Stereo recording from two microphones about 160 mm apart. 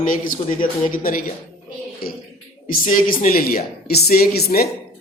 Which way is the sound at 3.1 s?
65° left (ahead or behind).